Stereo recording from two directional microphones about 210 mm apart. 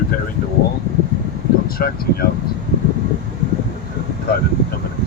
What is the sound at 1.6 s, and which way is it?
Speech, 45° left (ahead or behind).